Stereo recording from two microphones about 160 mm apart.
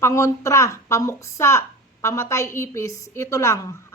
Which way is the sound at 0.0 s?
20° left (ahead or behind).